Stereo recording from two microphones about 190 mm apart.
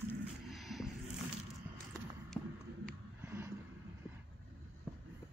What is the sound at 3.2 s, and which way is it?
Vehicle, 15° right (ahead or behind).